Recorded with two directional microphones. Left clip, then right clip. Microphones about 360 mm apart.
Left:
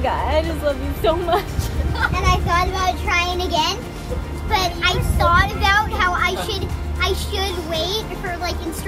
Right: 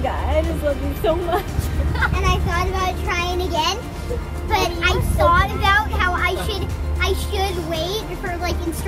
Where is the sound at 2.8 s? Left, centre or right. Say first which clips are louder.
Left 3 dB; left.